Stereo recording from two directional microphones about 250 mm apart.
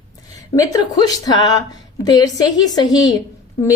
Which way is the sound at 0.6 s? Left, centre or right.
Centre.